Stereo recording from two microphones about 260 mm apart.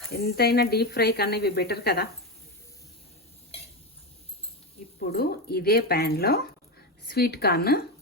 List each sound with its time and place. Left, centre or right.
0.1 s speech: left
4.9 s speech: left